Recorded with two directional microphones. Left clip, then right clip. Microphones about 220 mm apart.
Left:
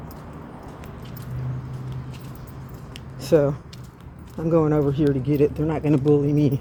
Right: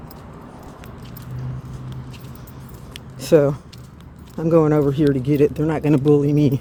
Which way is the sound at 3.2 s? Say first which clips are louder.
Right 4 dB; 35° right (ahead or behind).